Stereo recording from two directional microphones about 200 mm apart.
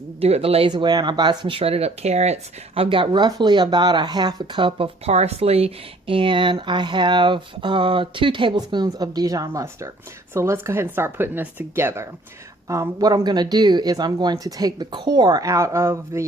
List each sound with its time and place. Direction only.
0.2 s speech: 30° right (ahead or behind); by 16.2 s 15° right (ahead or behind)